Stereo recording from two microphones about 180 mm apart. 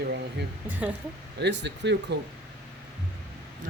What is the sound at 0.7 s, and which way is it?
Speech, 10° right (ahead or behind).